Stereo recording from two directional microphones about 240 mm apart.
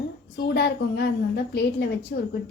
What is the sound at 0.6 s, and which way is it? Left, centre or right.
A woman's voice, left.